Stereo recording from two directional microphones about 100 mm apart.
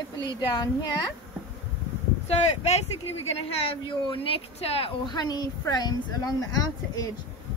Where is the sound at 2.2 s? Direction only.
90° left.